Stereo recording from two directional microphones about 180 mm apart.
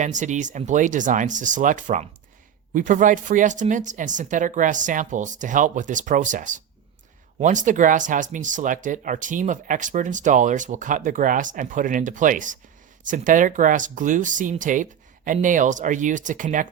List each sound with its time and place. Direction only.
0.0 s speech: 45° right (ahead or behind)